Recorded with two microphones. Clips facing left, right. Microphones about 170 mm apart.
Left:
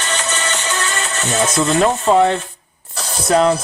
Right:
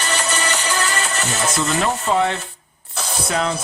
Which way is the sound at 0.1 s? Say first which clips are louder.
Even; 10° right (ahead or behind).